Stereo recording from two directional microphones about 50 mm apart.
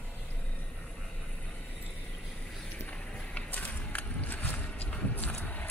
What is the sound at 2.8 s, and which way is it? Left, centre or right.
Run, left.